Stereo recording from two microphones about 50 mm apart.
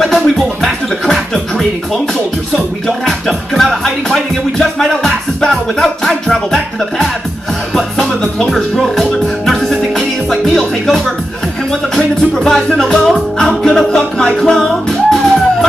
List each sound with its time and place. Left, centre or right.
0.0 s music: centre
3.1 s music: centre
5.8 s speech: centre
7.7 s music: centre
8.5 s speech: centre
9.5 s music: centre